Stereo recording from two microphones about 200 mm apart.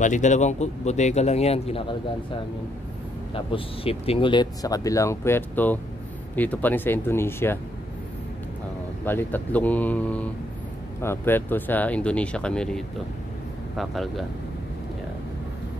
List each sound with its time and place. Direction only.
0.0 s speech: 35° left (ahead or behind)
3.3 s speech: 30° left (ahead or behind); by 7.5 s 10° left (ahead or behind)
9.0 s speech: 10° left (ahead or behind)